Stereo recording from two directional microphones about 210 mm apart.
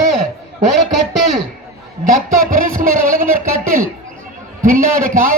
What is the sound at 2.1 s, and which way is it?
A man's voice, 40° right (ahead or behind).